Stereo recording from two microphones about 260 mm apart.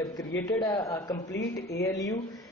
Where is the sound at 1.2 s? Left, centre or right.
Left.